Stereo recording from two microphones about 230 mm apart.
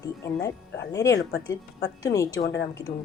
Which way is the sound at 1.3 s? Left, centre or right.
Left.